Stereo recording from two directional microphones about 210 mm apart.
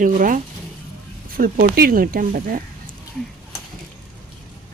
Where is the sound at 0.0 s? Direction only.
40° right (ahead or behind).